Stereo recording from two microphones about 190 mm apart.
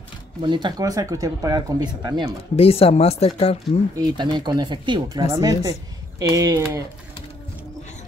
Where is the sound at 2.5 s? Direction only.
30° left (ahead or behind).